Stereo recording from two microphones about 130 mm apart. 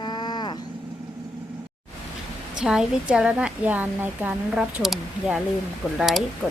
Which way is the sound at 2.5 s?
5° right (ahead or behind).